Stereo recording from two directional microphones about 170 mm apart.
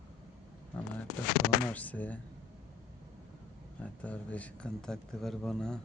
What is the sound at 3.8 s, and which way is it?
Speech, 10° left (ahead or behind).